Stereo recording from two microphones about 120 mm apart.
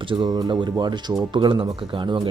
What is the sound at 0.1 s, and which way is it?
Speech, 35° right (ahead or behind).